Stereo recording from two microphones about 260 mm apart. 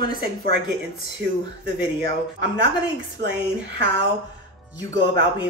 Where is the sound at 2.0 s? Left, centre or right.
Right.